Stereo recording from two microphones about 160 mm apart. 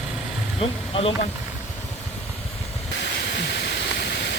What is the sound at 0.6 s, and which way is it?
Speech, 35° left (ahead or behind).